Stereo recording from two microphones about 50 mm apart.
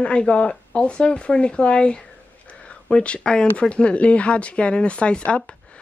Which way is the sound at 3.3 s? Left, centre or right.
Centre.